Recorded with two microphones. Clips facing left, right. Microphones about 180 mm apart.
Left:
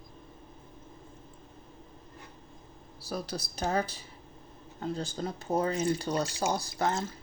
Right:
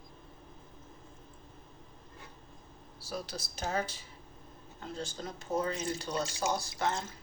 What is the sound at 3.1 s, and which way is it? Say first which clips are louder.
Speech: left 4 dB; 35° left (ahead or behind).